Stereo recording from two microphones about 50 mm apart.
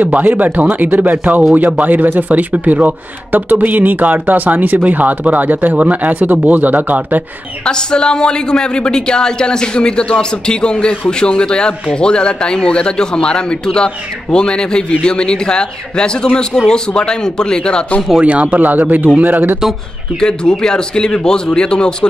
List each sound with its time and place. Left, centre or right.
0.0 s a man's voice: right
7.6 s speech: centre
18.2 s a man's voice: right
20.2 s speech: centre